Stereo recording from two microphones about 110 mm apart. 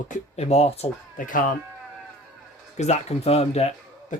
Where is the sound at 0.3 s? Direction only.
70° left (ahead or behind).